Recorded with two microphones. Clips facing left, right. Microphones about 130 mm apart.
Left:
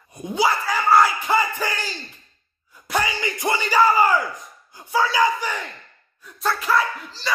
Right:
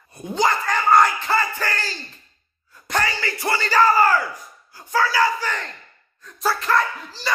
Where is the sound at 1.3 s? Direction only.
15° left (ahead or behind).